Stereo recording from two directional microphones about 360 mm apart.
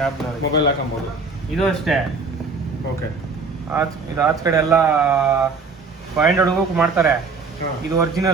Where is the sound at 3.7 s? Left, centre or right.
Centre.